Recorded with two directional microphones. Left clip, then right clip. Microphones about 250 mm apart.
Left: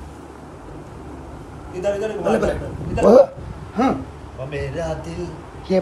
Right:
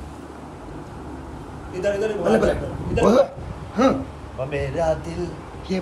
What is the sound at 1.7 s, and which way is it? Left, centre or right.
A man's voice, centre.